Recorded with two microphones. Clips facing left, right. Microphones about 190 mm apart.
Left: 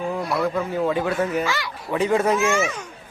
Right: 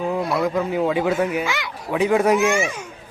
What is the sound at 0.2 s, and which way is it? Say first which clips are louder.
Speech: right 2 dB; centre (ahead or behind).